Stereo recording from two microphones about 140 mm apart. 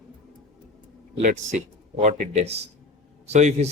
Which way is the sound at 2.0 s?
55° right (ahead or behind).